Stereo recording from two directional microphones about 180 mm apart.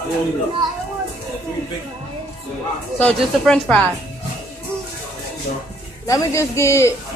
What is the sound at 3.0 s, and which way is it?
Speech, 5° left (ahead or behind).